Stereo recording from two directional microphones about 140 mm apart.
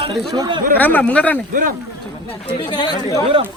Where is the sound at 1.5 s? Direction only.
85° right.